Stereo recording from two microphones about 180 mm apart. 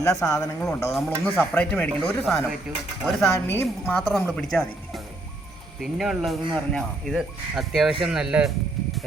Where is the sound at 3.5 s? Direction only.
10° left (ahead or behind).